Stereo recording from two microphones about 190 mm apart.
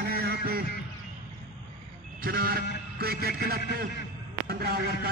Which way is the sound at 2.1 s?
50° right (ahead or behind).